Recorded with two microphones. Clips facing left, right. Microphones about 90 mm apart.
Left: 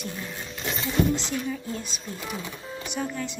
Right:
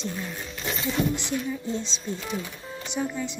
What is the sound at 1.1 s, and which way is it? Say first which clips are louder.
Speech: even; 15° right (ahead or behind).